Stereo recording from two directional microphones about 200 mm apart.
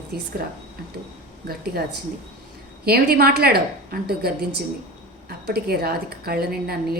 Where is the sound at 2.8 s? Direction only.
50° right (ahead or behind).